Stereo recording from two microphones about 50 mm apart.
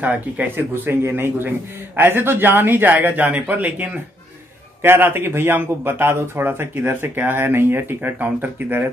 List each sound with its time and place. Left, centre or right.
0.0 s speech: right
0.6 s speech: right
4.8 s speech: right
6.7 s speech: right
7.2 s speech: right